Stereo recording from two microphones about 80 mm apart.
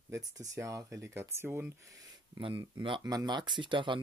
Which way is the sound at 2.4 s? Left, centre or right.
Right.